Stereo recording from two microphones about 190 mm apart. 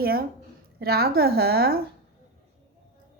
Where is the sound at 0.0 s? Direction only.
55° right (ahead or behind).